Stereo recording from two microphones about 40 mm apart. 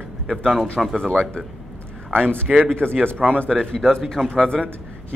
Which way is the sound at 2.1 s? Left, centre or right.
Right.